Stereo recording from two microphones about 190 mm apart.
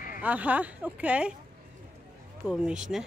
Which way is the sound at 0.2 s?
10° right (ahead or behind).